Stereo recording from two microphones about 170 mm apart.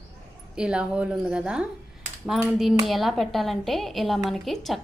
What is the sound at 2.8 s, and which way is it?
A woman's voice, centre (ahead or behind).